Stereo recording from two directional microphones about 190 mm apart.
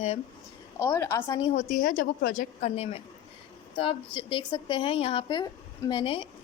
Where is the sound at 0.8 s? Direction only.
15° left (ahead or behind).